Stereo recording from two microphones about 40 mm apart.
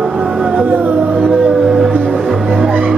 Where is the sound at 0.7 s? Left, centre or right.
Right.